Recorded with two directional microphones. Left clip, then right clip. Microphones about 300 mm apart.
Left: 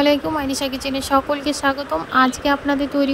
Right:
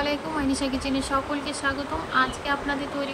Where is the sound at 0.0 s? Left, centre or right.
Left.